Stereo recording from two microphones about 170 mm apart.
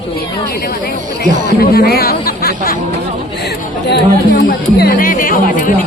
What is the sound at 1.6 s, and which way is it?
Speech, 65° left (ahead or behind).